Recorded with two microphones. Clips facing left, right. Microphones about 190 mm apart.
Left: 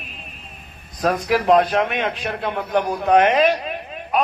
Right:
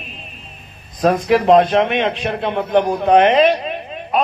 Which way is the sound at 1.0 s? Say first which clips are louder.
Right 5 dB; 25° right (ahead or behind).